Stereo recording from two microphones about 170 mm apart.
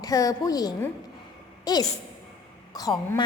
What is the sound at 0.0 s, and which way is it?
A woman's voice, 20° left (ahead or behind).